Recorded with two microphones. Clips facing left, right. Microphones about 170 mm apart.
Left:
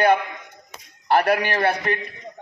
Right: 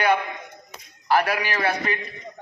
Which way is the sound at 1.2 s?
55° left (ahead or behind).